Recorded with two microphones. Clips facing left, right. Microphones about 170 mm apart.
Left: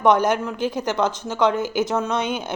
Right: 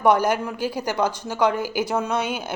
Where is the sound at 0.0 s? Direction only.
10° right (ahead or behind).